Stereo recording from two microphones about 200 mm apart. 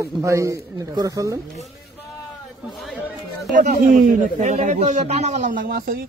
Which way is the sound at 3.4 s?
45° right (ahead or behind).